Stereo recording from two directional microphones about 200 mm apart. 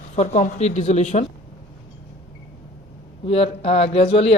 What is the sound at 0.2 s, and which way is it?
Speech, 35° left (ahead or behind).